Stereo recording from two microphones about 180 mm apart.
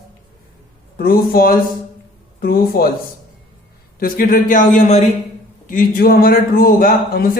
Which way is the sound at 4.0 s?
50° left (ahead or behind).